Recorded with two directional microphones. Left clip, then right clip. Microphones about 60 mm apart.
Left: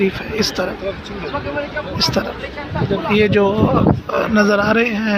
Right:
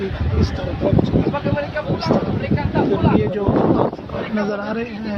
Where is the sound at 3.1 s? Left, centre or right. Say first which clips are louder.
Left 6 dB; left.